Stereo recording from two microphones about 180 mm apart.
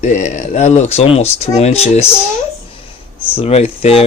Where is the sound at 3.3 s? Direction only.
35° left (ahead or behind).